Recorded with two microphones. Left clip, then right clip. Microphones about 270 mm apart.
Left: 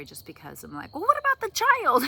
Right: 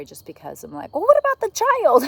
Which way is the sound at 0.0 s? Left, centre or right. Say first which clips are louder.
Right 7 dB; left.